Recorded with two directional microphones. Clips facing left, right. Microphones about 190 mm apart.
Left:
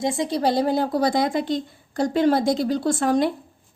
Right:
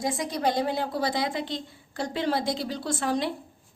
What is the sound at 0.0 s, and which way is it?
A woman's voice, 25° left (ahead or behind).